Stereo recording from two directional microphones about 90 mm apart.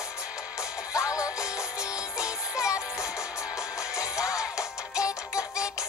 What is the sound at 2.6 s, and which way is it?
Music, 35° left (ahead or behind).